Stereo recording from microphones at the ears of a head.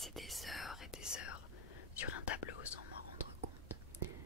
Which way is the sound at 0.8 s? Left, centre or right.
Left.